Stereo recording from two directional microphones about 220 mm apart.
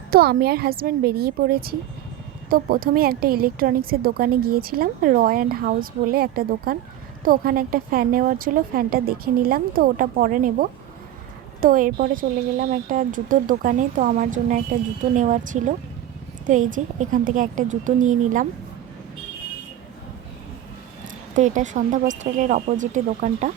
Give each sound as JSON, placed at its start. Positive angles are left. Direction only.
{"t": 0.1, "sound": "a woman's voice", "side_deg": -45}
{"t": 21.3, "sound": "a woman's voice", "side_deg": -35}